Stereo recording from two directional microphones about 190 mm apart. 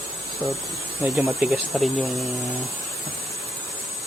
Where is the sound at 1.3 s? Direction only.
Centre (ahead or behind).